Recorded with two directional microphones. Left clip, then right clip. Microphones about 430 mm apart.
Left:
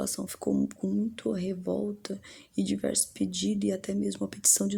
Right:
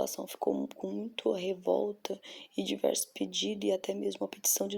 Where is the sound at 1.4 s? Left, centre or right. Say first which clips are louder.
Right 2 dB; left.